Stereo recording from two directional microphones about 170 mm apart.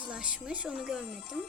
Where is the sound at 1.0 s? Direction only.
35° right (ahead or behind).